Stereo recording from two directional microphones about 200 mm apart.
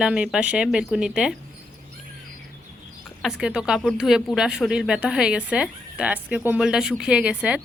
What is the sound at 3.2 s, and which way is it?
A woman's voice, centre (ahead or behind).